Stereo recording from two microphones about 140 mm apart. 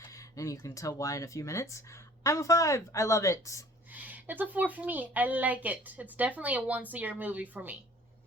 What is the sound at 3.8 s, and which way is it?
A woman's voice, 10° right (ahead or behind).